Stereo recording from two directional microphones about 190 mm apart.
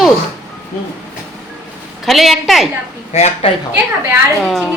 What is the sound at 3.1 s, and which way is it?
Speech, 35° left (ahead or behind).